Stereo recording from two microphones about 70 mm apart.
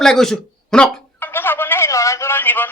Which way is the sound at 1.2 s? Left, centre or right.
Left.